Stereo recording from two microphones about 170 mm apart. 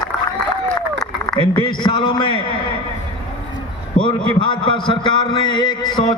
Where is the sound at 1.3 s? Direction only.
30° left (ahead or behind).